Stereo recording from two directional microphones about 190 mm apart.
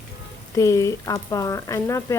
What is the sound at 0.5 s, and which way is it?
Speech, 15° left (ahead or behind).